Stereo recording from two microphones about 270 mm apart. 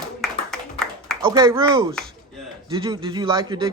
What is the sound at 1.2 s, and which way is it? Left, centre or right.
Speech, centre.